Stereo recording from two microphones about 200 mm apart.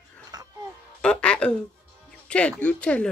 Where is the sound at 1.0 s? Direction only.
5° left (ahead or behind).